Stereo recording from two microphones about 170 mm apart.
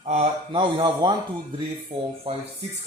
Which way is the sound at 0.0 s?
40° right (ahead or behind).